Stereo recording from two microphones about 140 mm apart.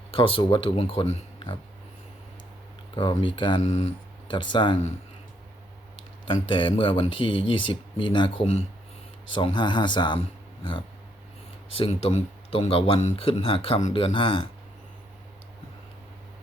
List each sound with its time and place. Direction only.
0.1 s speech: 40° left (ahead or behind)
2.9 s speech: 35° left (ahead or behind)
3.6 s speech: 50° left (ahead or behind)
4.3 s speech: 35° left (ahead or behind)
6.2 s speech: 40° left (ahead or behind)